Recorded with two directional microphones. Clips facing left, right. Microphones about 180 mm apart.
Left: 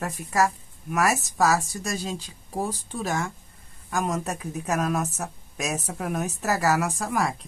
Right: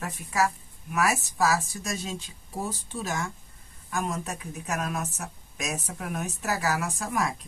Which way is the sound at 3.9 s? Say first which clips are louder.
Left 4 dB; 40° left (ahead or behind).